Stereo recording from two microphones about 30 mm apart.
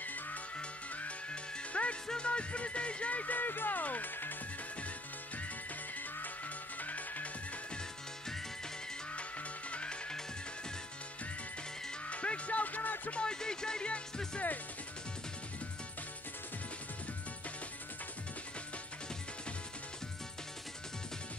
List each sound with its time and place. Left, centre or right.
0.0 s music: left
0.6 s music: left
3.3 s speech: left
6.8 s music: left
9.7 s music: left
12.1 s speech: left
13.1 s music: left